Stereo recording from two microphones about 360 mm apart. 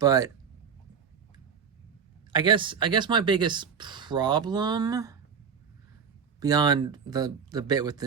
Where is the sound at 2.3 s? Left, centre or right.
Centre.